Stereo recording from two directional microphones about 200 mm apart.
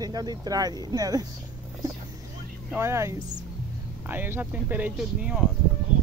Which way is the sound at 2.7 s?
15° right (ahead or behind).